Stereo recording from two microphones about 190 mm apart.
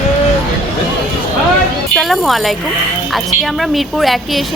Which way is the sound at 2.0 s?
Centre (ahead or behind).